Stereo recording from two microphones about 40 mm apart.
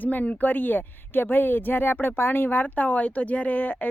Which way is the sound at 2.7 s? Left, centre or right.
Left.